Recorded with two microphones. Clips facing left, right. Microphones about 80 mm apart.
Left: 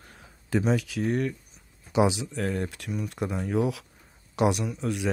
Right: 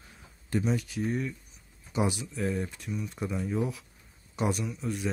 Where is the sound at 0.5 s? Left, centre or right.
Left.